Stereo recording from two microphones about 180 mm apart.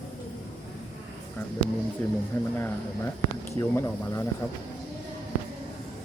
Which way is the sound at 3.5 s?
15° left (ahead or behind).